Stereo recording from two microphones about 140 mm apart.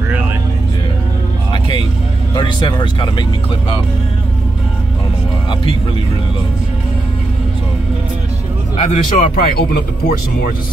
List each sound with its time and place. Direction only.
1.5 s music: 35° left (ahead or behind)
2.3 s speech: 35° left (ahead or behind)
8.7 s speech: 50° left (ahead or behind); by 10.5 s 80° left